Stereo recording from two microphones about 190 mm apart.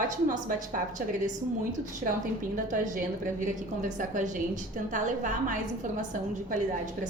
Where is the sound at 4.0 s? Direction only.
40° right (ahead or behind).